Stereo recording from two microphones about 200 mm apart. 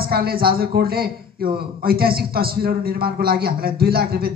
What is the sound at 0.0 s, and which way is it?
A man's voice, 50° right (ahead or behind).